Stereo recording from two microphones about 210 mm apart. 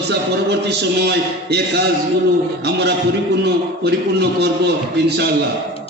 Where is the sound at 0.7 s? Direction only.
50° right (ahead or behind).